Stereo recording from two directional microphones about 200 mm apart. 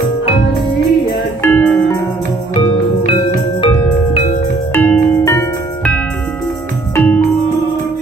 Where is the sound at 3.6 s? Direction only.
30° left (ahead or behind).